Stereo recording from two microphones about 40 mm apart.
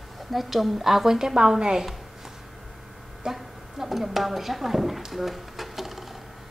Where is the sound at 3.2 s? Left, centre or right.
Centre.